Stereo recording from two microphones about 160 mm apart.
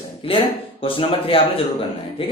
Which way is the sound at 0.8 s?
35° left (ahead or behind).